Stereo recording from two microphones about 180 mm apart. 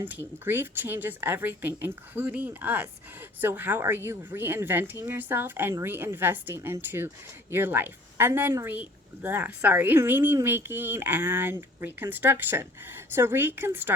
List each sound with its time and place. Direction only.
0.0 s speech: 10° right (ahead or behind)